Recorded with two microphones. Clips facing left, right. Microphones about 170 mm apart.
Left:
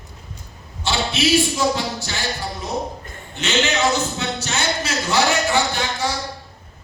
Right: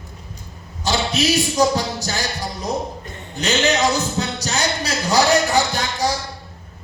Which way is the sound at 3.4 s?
35° right (ahead or behind).